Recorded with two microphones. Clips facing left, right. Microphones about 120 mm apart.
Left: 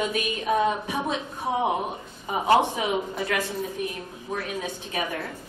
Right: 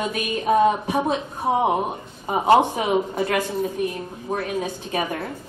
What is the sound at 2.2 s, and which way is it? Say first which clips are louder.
A woman's voice: right 4 dB; 35° right (ahead or behind).